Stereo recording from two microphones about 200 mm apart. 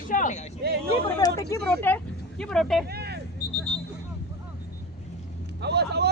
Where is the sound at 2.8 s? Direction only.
55° right (ahead or behind).